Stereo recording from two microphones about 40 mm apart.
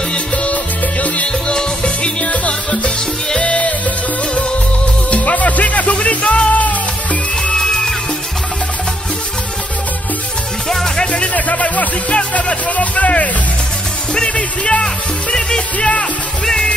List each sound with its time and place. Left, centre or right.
0.1 s music: left
1.5 s music: left
2.2 s music: left
5.1 s music: left
7.5 s music: centre
10.7 s music: centre
11.1 s music: left
12.2 s speech: left
14.3 s music: left